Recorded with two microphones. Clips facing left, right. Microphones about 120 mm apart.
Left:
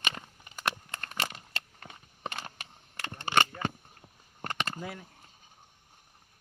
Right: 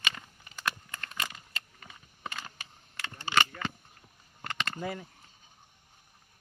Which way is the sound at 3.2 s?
55° left (ahead or behind).